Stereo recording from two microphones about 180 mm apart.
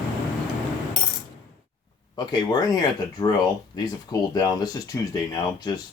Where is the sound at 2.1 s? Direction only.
25° left (ahead or behind).